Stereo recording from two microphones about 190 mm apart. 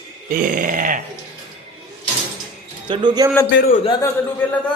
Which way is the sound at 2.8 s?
25° right (ahead or behind).